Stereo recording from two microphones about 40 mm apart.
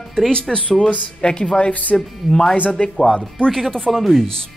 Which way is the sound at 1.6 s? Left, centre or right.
Left.